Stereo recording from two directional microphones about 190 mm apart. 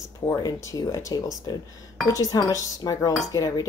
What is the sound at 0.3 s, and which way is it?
A woman's voice, 15° left (ahead or behind).